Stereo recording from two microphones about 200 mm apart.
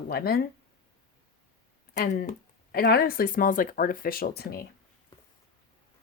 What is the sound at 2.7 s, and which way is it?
Speech, 50° left (ahead or behind).